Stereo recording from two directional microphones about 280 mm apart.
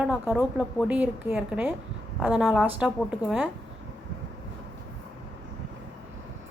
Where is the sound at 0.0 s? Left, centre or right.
Centre.